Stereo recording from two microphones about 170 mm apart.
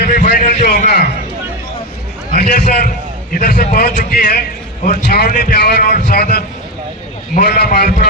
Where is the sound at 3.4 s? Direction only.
75° left (ahead or behind).